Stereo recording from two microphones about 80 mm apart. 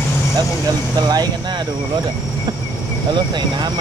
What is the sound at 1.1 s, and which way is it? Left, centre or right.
Vehicle, right.